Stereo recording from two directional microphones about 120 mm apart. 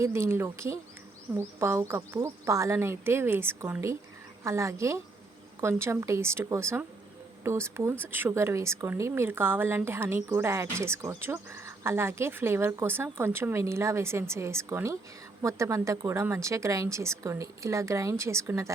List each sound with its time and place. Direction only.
0.0 s speech: 20° right (ahead or behind)